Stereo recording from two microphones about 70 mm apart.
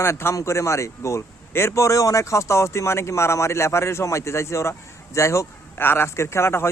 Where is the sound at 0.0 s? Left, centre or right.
Left.